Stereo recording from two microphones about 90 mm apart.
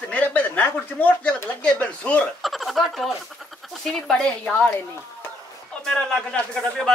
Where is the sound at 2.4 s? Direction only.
Centre (ahead or behind).